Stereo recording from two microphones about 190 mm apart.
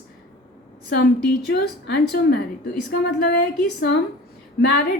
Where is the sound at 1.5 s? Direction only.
60° left (ahead or behind).